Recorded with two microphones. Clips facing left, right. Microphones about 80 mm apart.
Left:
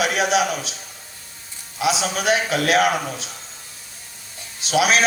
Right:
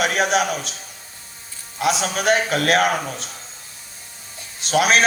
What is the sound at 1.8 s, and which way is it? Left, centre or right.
A man's voice, right.